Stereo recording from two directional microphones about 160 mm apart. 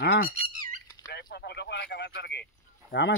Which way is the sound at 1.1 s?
90° left.